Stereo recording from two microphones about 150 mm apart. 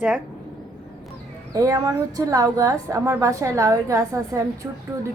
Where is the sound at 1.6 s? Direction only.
25° right (ahead or behind).